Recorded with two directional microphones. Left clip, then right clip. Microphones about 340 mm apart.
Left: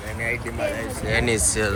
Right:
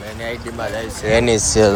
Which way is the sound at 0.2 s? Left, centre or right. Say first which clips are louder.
Even; centre.